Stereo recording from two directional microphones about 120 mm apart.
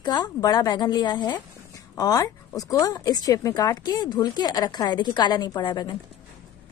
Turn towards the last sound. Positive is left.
turn(degrees=35)  # may be behind; listen again after turning